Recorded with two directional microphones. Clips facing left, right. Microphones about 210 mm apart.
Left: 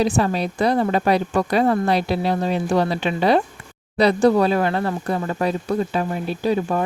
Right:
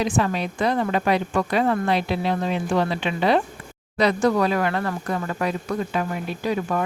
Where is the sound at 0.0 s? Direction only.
35° left (ahead or behind).